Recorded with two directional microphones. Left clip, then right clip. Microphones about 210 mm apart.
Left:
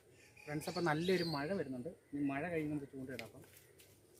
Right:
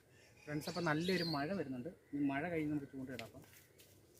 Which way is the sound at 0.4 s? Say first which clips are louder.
Left 1 dB; 5° left (ahead or behind).